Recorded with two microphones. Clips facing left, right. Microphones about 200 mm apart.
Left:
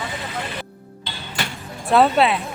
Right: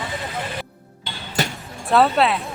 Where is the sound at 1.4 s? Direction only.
40° right (ahead or behind).